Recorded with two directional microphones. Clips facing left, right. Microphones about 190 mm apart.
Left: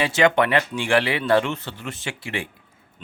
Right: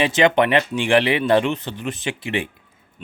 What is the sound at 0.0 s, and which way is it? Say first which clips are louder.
A man's voice: right 2 dB; 20° right (ahead or behind).